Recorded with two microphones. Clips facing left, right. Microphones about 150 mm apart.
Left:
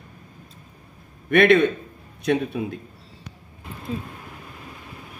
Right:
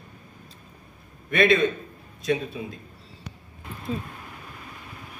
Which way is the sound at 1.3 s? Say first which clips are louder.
Left 4 dB; 60° left (ahead or behind).